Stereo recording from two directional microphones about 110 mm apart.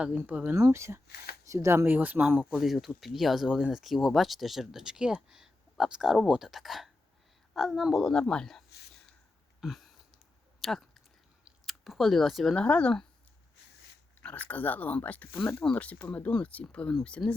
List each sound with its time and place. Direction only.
0.2 s speech: 15° right (ahead or behind)
0.5 s speech: 30° right (ahead or behind)
2.4 s speech: 5° right (ahead or behind)
9.6 s a sound: centre (ahead or behind)
12.6 s speech: 10° left (ahead or behind)
14.2 s speech: 15° left (ahead or behind)